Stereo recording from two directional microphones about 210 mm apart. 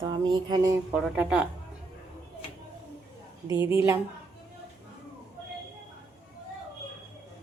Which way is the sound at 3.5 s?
15° right (ahead or behind).